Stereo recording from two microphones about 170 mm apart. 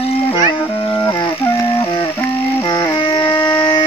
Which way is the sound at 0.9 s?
15° left (ahead or behind).